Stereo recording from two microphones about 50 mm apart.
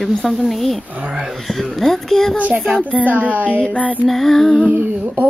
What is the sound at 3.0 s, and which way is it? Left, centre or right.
Speech, right.